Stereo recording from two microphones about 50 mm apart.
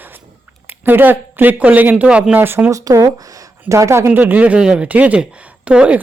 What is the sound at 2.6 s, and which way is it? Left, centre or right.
A woman's voice, right.